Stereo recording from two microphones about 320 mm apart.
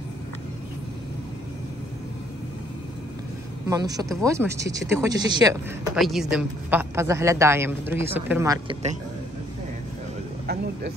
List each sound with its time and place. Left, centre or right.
3.6 s speech: centre
5.9 s speech: centre
10.4 s a sound: right